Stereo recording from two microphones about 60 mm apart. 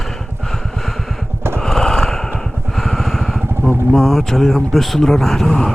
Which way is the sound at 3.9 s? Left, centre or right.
Centre.